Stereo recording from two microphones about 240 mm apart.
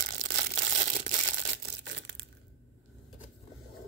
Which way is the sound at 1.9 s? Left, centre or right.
Right.